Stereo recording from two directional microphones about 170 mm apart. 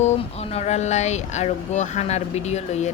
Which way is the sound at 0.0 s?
40° left (ahead or behind).